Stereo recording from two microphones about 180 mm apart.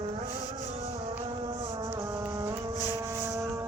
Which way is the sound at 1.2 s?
30° right (ahead or behind).